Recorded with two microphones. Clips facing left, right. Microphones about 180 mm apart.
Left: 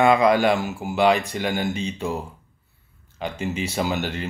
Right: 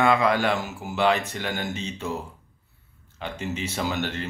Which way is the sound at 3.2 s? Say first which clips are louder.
Left 4 dB; 10° left (ahead or behind).